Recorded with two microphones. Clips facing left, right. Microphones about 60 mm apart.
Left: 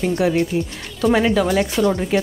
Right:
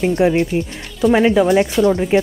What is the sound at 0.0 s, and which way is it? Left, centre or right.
Speech, centre.